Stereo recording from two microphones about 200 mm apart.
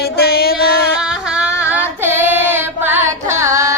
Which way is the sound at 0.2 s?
50° left (ahead or behind).